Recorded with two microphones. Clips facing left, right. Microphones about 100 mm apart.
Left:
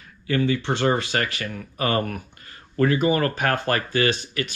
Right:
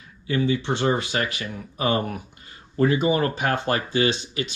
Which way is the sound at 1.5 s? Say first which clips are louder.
Right 1 dB; 20° right (ahead or behind).